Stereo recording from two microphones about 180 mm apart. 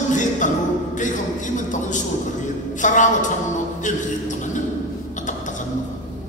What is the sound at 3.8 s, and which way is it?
Music, 45° left (ahead or behind).